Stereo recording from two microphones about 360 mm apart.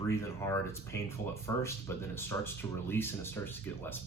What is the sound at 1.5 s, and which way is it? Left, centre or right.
Speech, centre.